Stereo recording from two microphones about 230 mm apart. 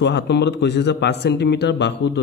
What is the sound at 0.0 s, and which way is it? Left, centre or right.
Speech, left.